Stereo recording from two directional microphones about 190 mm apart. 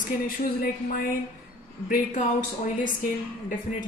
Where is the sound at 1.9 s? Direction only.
40° left (ahead or behind).